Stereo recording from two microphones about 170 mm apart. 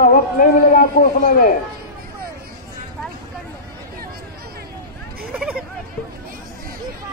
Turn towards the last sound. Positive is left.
turn(degrees=-5)  # may be behind; listen again after turning